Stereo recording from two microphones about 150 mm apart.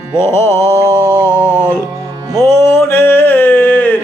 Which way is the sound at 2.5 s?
15° left (ahead or behind).